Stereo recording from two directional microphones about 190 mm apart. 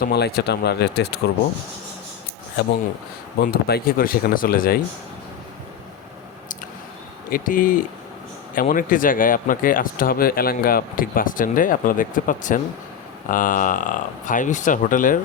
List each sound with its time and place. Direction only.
0.0 s speech: 55° left (ahead or behind)
3.4 s speech: 50° left (ahead or behind)
7.3 s speech: 45° left (ahead or behind)